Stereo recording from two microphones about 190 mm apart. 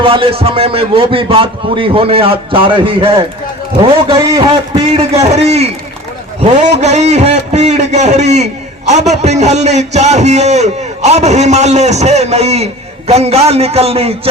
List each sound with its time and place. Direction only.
0.0 s a man's voice: 30° right (ahead or behind)